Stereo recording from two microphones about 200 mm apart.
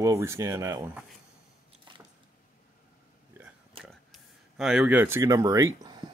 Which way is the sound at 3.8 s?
Centre (ahead or behind).